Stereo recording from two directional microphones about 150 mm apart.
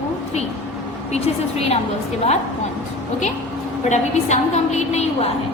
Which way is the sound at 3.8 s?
50° left (ahead or behind).